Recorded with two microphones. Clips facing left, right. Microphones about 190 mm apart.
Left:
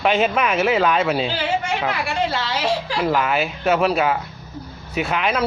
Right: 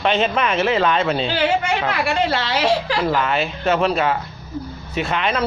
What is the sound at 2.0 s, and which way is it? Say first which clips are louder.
Speech: right 3 dB; 70° right (ahead or behind).